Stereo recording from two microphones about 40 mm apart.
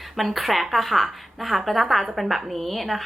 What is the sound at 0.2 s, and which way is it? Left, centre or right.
A woman's voice, centre.